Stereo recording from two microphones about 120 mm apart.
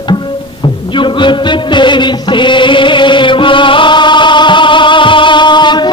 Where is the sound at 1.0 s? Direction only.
40° left (ahead or behind).